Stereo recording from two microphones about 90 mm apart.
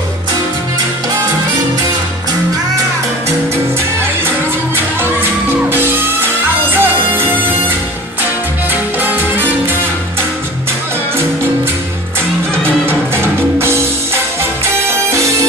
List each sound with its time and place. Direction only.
5.7 s music: 20° right (ahead or behind)
9.0 s music: 20° right (ahead or behind)
12.8 s music: 25° right (ahead or behind)